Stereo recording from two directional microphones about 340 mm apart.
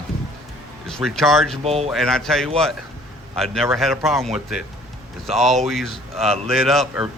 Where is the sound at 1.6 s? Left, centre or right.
Centre.